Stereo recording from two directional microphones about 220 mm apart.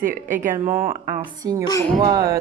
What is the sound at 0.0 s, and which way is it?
Speech, 35° right (ahead or behind).